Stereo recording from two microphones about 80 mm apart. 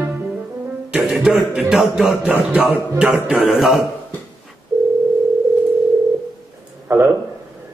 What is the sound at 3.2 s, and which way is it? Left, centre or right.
Speech, centre.